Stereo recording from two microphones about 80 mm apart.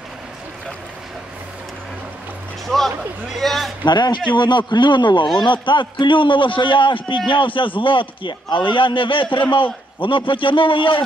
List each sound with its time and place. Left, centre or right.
3.3 s a man's voice: centre
3.8 s a man's voice: left